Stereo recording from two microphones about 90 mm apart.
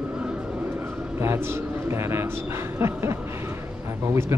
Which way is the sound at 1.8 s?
30° right (ahead or behind).